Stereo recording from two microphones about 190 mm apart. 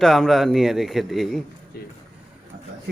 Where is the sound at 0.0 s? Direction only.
Centre (ahead or behind).